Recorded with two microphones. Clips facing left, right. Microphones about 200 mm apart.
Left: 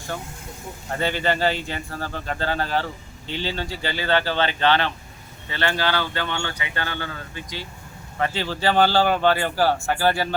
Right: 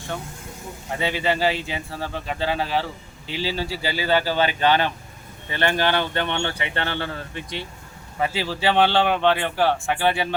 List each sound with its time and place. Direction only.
0.9 s speech: centre (ahead or behind); by 7.4 s 30° right (ahead or behind)
8.2 s speech: 5° right (ahead or behind)